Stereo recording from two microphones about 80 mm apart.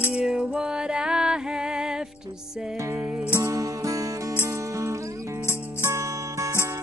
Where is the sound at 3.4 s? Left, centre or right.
Right.